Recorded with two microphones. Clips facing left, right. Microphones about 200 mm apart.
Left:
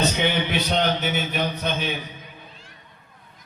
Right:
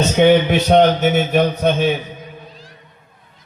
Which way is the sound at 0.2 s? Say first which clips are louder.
Right 11 dB; 50° right (ahead or behind).